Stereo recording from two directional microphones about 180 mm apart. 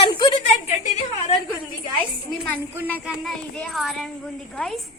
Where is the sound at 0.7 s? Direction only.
40° left (ahead or behind).